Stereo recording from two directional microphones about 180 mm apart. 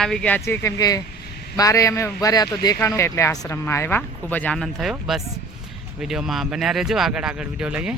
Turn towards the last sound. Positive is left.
turn(degrees=-5)  # may be behind; listen again after turning